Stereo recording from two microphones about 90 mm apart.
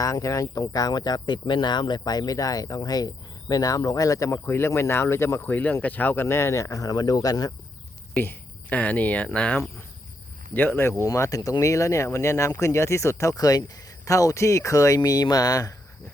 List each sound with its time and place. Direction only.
0.0 s speech: 40° left (ahead or behind)
8.1 s speech: 20° left (ahead or behind)
11.0 s speech: 40° left (ahead or behind)